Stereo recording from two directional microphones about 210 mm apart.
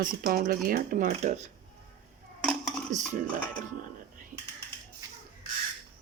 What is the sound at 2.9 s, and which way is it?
Speech, 40° right (ahead or behind).